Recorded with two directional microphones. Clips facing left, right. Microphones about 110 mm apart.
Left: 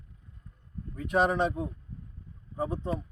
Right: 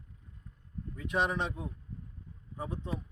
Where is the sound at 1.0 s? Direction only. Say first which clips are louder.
Left 6 dB; 45° left (ahead or behind).